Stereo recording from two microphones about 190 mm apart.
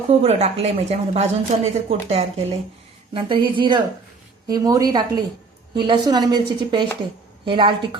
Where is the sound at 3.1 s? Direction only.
25° right (ahead or behind).